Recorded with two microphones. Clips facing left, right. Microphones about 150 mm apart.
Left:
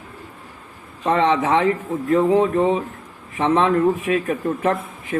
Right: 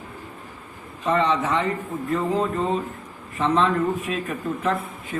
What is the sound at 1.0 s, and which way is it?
A man's voice, 70° left (ahead or behind).